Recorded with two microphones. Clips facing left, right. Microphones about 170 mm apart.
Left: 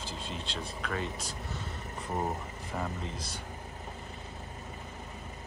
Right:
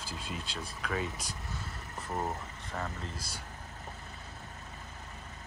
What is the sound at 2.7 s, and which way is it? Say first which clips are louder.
Speech: left 3 dB; 10° left (ahead or behind).